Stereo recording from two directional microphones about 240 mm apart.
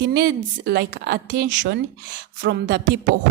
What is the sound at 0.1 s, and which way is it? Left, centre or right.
A woman's voice, right.